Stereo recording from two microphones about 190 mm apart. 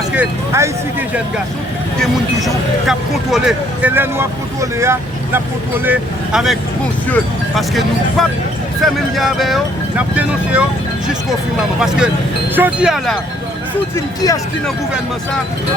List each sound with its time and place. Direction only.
0.1 s speech: 10° right (ahead or behind)
3.3 s speech: 5° right (ahead or behind)
11.8 s speech: 5° right (ahead or behind)
13.9 s speech: 20° left (ahead or behind)